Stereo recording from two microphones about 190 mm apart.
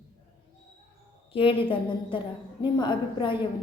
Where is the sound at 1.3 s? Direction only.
30° left (ahead or behind).